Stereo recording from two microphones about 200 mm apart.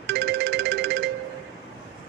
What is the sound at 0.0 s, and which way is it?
Music, 55° right (ahead or behind).